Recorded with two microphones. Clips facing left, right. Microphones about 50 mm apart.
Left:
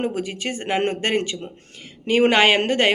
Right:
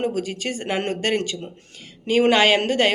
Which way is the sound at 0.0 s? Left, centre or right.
Left.